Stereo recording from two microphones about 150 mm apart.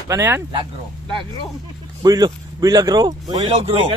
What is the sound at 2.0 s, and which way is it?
Speech, 25° right (ahead or behind).